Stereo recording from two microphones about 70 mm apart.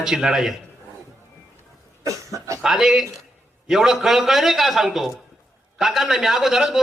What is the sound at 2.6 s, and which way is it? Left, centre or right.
A man's voice, centre.